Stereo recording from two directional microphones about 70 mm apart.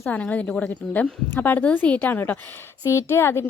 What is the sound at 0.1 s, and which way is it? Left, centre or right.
Speech, left.